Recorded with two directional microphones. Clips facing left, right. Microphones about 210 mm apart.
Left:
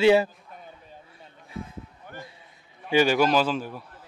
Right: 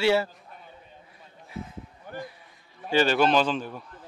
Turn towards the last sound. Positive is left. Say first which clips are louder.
# even
turn(degrees=5)  # may be behind; listen again after turning